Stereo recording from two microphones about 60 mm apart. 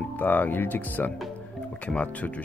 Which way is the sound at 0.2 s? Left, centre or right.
Left.